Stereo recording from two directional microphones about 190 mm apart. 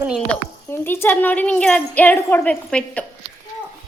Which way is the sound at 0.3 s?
10° left (ahead or behind).